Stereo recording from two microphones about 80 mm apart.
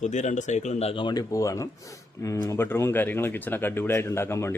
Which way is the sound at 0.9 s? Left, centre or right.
Left.